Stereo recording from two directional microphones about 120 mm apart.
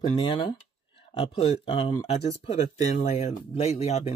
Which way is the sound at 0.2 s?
45° left (ahead or behind).